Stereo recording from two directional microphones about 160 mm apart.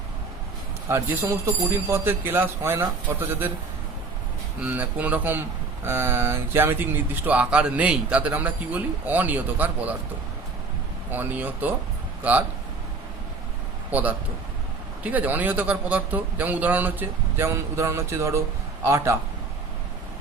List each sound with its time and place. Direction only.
0.9 s speech: 15° right (ahead or behind)
4.6 s speech: 10° right (ahead or behind)
11.1 s speech: 10° right (ahead or behind)
13.9 s speech: 10° right (ahead or behind)